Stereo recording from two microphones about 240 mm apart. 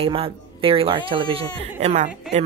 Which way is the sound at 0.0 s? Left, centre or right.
Right.